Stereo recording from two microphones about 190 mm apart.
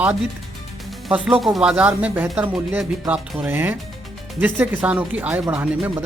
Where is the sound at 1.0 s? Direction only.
Centre (ahead or behind).